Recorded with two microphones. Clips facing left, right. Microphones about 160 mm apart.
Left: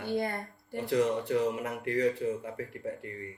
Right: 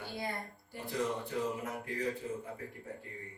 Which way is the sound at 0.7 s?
70° left (ahead or behind).